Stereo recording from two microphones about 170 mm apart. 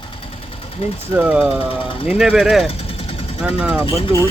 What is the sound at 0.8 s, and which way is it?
Speech, 35° left (ahead or behind).